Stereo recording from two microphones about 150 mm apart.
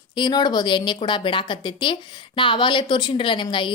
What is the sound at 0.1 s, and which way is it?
A woman's voice, 30° left (ahead or behind).